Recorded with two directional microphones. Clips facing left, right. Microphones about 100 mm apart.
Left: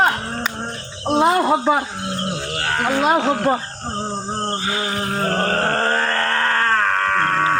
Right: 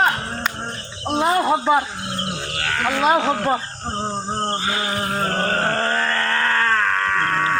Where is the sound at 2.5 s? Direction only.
35° left (ahead or behind).